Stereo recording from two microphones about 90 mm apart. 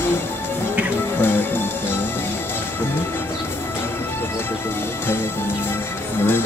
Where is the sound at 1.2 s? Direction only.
25° left (ahead or behind).